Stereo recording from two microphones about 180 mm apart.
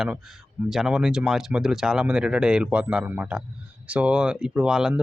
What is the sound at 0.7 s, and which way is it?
Speech, 5° right (ahead or behind).